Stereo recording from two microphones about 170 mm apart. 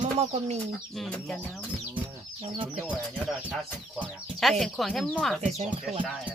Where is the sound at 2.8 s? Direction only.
Centre (ahead or behind).